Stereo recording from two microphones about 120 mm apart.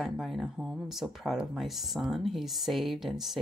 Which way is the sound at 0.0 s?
Centre (ahead or behind).